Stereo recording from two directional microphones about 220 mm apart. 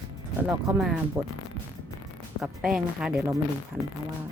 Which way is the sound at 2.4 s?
Centre (ahead or behind).